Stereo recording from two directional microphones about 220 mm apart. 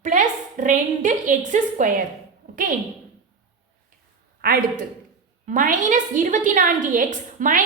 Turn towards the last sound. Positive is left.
turn(degrees=-35)  # may be behind; listen again after turning